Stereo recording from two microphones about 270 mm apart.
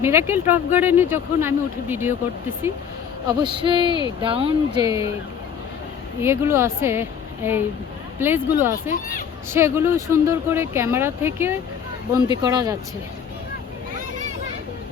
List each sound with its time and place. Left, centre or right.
0.0 s speech: centre
6.2 s speech: centre
8.9 s speech: left
9.5 s speech: centre